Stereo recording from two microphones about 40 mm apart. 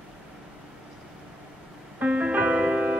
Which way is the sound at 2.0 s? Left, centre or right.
Right.